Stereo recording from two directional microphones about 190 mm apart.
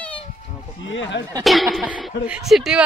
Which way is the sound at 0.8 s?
75° left (ahead or behind).